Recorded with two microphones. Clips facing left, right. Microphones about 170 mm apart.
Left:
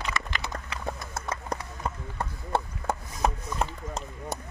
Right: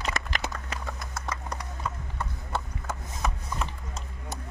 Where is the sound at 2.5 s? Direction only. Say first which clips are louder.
Left 5 dB; 55° left (ahead or behind).